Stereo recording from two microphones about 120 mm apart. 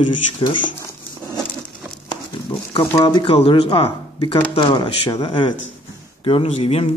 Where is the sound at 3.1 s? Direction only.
40° left (ahead or behind).